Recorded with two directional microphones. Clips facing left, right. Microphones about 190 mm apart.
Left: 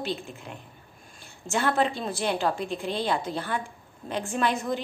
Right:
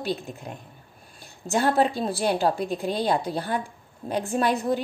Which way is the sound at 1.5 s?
35° right (ahead or behind).